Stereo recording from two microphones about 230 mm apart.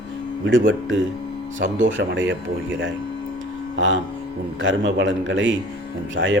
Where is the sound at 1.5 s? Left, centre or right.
Right.